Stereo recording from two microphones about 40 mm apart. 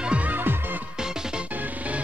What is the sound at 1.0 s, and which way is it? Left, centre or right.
Music, centre.